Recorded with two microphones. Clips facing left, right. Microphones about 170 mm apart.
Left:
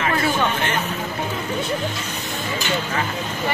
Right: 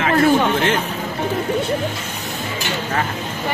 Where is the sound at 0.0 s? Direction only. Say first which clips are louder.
Right 6 dB; 65° right (ahead or behind).